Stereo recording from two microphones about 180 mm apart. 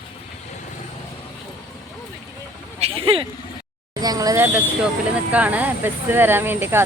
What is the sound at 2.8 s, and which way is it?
Speech, 30° right (ahead or behind).